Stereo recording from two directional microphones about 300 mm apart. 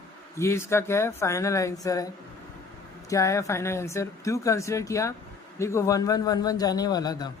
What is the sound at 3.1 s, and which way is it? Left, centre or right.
A man's voice, centre.